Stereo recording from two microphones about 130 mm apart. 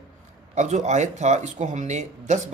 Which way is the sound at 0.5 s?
65° right (ahead or behind).